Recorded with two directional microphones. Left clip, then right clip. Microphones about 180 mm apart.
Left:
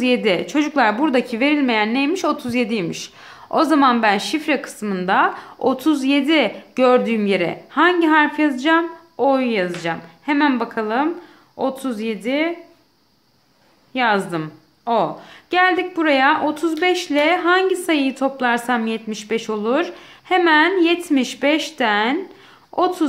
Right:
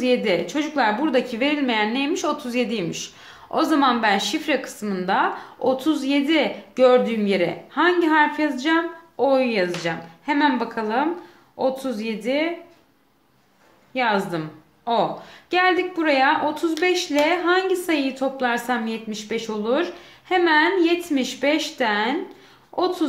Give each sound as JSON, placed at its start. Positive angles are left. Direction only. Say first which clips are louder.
{"t": 0.0, "sound": "speech", "louder": "left 2 dB", "side_deg": 30}
{"t": 13.9, "sound": "speech", "louder": "left 3 dB", "side_deg": 30}